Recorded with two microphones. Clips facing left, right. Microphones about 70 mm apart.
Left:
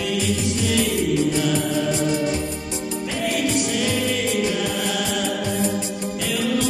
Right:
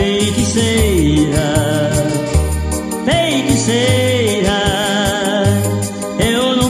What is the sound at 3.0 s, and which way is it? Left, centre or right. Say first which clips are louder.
Music: right 10 dB; right.